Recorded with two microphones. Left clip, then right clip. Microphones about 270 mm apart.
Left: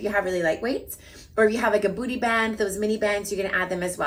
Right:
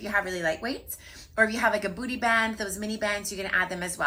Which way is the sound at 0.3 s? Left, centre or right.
Centre.